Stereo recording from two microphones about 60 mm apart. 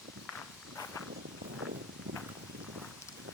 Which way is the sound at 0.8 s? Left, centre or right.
Left.